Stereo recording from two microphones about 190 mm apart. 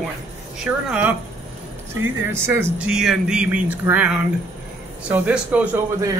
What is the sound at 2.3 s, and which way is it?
Speech, 10° right (ahead or behind).